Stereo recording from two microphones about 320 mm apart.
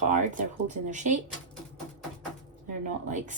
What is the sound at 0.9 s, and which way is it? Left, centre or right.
Speech, right.